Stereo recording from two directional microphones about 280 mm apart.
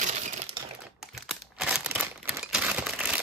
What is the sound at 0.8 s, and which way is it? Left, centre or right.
Crumpling, centre.